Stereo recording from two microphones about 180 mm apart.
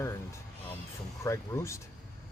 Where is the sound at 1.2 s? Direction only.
15° left (ahead or behind).